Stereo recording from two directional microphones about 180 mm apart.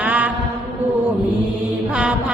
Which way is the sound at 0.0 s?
10° right (ahead or behind).